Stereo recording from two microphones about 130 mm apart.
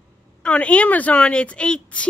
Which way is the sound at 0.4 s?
10° left (ahead or behind).